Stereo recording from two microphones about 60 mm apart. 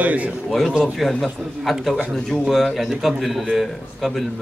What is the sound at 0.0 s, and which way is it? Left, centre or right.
Speech, right.